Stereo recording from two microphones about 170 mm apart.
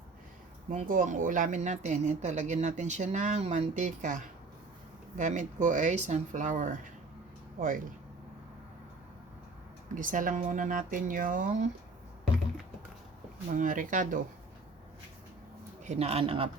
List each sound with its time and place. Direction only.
0.7 s speech: 50° right (ahead or behind)
9.9 s speech: 50° right (ahead or behind)
13.6 s speech: 50° right (ahead or behind)
15.8 s a man's voice: 40° right (ahead or behind)